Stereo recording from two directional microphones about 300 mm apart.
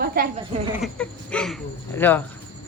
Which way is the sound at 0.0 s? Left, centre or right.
Right.